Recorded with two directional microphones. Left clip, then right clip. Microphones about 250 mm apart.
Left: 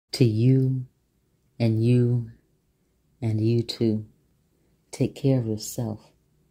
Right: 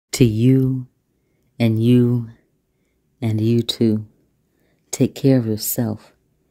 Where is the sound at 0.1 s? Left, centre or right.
Centre.